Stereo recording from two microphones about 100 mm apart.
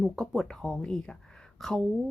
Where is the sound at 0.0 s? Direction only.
Centre (ahead or behind).